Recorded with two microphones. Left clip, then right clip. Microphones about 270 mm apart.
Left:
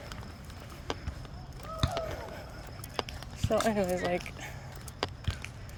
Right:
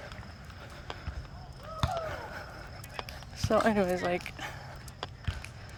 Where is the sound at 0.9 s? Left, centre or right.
Left.